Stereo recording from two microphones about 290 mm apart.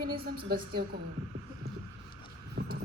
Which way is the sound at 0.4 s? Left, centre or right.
Right.